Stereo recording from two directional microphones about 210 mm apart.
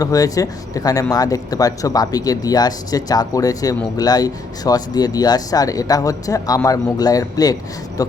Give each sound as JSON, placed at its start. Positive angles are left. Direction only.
{"t": 0.0, "sound": "speech", "side_deg": 15}